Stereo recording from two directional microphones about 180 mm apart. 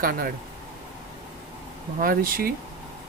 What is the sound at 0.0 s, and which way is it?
Speech, 55° right (ahead or behind).